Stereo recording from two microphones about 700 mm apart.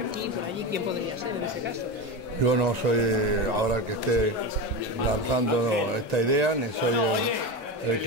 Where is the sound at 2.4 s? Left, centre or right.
Right.